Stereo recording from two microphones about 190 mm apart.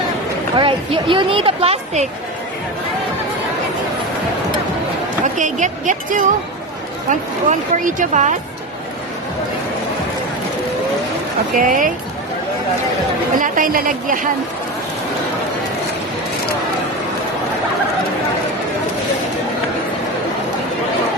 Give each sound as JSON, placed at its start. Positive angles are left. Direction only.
{"t": 0.5, "sound": "speech", "side_deg": -25}
{"t": 5.2, "sound": "speech", "side_deg": -40}
{"t": 11.5, "sound": "speech", "side_deg": -45}
{"t": 13.3, "sound": "a woman's voice", "side_deg": -45}